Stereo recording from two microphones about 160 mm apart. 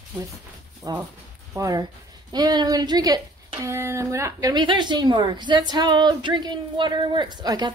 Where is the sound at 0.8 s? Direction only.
25° right (ahead or behind).